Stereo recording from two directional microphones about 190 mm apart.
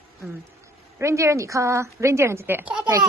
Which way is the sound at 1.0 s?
15° right (ahead or behind).